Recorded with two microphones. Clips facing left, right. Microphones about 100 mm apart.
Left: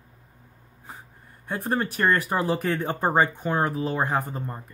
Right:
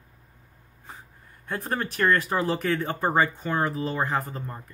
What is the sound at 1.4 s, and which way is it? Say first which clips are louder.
Speech: left 3 dB; 5° left (ahead or behind).